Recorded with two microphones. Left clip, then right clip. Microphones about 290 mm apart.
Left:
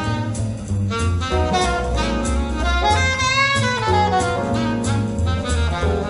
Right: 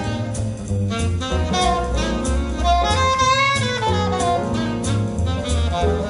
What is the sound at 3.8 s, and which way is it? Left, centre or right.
Music, right.